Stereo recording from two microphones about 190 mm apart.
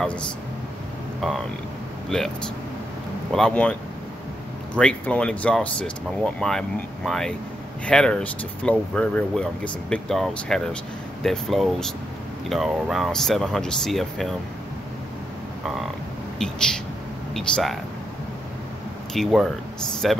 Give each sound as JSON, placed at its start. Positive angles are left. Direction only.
{"t": 2.0, "sound": "speech", "side_deg": 5}
{"t": 3.3, "sound": "speech", "side_deg": 5}
{"t": 4.7, "sound": "speech", "side_deg": 5}
{"t": 16.3, "sound": "speech", "side_deg": 5}
{"t": 19.1, "sound": "speech", "side_deg": 0}